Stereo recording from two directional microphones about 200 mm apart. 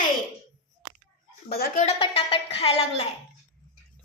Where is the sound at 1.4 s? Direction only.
50° left (ahead or behind).